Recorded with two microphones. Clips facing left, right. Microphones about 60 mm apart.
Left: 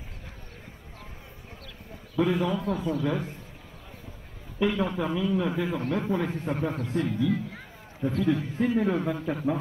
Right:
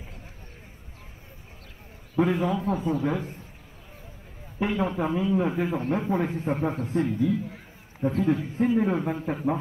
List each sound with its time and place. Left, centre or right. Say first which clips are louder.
2.1 s a man's voice: right 1 dB; right
4.6 s a man's voice: even; right
7.1 s a man's voice: right 1 dB; left
8.0 s a man's voice: right 2 dB; right